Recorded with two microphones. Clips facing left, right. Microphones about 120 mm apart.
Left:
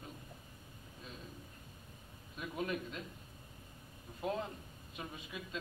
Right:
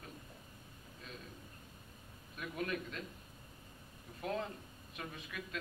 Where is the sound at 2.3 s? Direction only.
20° left (ahead or behind).